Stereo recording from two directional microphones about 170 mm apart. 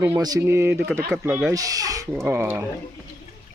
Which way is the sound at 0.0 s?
20° right (ahead or behind).